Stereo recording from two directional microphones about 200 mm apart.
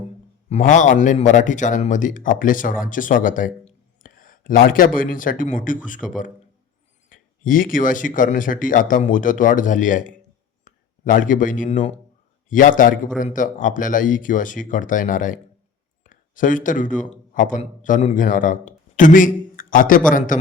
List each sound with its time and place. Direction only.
0.5 s speech: 40° left (ahead or behind)
4.0 s a sound: 45° left (ahead or behind)
4.9 s speech: 40° left (ahead or behind)